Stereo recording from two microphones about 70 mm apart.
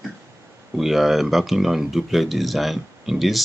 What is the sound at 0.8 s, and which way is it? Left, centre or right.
Speech, centre.